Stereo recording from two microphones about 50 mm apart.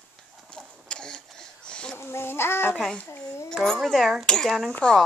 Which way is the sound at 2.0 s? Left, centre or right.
Left.